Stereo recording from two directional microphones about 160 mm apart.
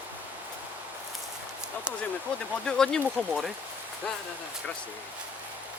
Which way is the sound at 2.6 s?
5° left (ahead or behind).